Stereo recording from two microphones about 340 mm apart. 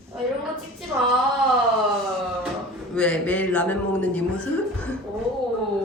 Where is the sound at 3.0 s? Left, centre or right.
Centre.